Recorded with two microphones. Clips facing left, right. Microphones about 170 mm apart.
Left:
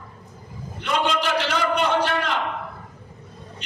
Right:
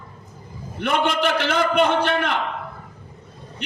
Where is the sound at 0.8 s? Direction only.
55° right (ahead or behind).